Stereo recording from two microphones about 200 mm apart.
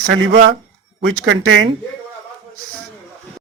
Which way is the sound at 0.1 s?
65° right (ahead or behind).